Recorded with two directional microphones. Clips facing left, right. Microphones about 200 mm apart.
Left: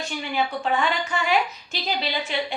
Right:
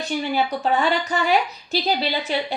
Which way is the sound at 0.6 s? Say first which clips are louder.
Right 3 dB; 40° right (ahead or behind).